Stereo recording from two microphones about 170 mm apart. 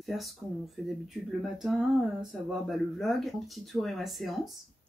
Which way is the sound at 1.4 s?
Centre (ahead or behind).